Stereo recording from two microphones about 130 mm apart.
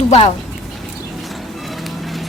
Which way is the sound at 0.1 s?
50° left (ahead or behind).